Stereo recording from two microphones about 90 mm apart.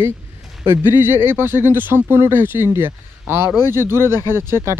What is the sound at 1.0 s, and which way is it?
Speech, 25° right (ahead or behind).